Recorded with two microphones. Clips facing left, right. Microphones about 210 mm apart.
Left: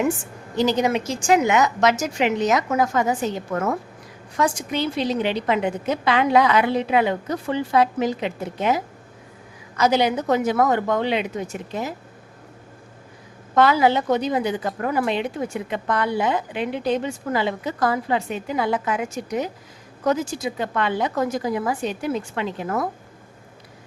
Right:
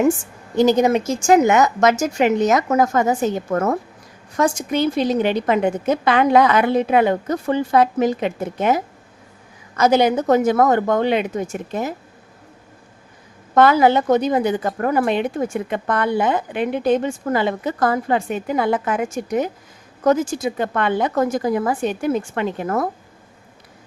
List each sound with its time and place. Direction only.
0.5 s a woman's voice: 45° right (ahead or behind)
13.6 s a woman's voice: 50° right (ahead or behind)